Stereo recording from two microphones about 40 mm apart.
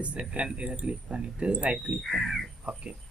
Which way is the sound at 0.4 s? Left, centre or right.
Right.